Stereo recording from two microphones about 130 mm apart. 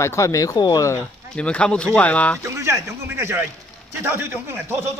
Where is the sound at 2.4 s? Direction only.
25° right (ahead or behind).